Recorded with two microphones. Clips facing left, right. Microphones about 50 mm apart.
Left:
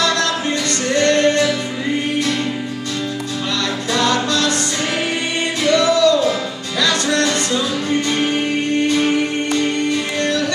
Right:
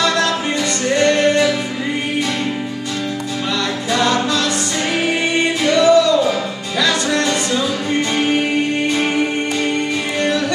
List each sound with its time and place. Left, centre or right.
0.8 s music: centre
3.9 s music: centre
5.6 s music: centre
8.8 s music: centre